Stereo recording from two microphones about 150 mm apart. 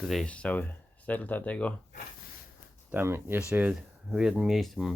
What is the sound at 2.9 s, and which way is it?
Speech, 15° right (ahead or behind).